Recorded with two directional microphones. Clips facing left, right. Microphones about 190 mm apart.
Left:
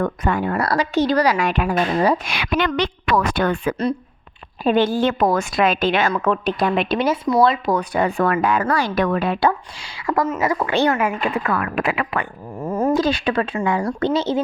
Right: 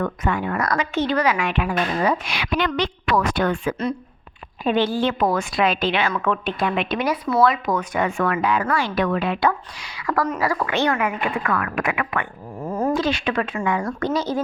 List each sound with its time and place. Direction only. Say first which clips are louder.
0.0 s a woman's voice: left 3 dB; 40° left (ahead or behind)
2.2 s a woman's voice: left 2 dB; 55° left (ahead or behind)
4.6 s a woman's voice: left 3 dB; 45° left (ahead or behind)
9.5 s a woman's voice: left 1 dB; 30° left (ahead or behind)